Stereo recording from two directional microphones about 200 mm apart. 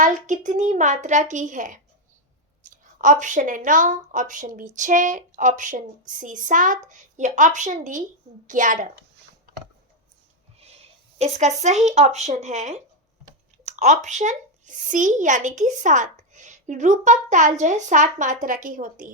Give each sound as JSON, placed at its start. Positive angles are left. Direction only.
{"t": 0.0, "sound": "speech", "side_deg": -40}
{"t": 10.6, "sound": "speech", "side_deg": -30}